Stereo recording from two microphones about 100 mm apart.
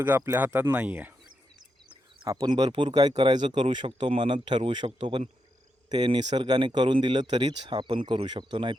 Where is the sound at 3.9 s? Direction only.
65° right (ahead or behind).